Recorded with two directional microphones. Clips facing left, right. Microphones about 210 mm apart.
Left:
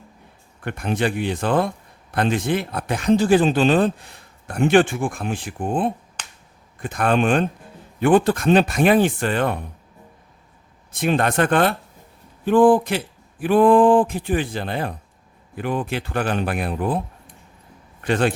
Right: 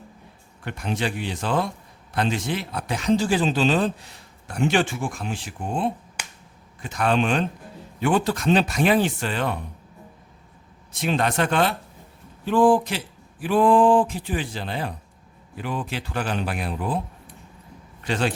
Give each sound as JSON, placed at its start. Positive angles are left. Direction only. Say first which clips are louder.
{"t": 0.6, "sound": "speech", "louder": "left 5 dB", "side_deg": 55}
{"t": 6.2, "sound": "finger snapping", "louder": "right 2 dB", "side_deg": -10}
{"t": 6.7, "sound": "speech", "louder": "left 3 dB", "side_deg": 50}
{"t": 10.9, "sound": "speech", "louder": "left 4 dB", "side_deg": 55}
{"t": 18.0, "sound": "speech", "louder": "left 5 dB", "side_deg": 55}